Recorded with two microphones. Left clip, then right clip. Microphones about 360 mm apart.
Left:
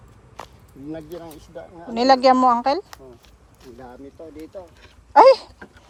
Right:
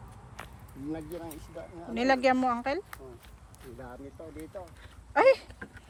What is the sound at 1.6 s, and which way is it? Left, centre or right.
Speech, centre.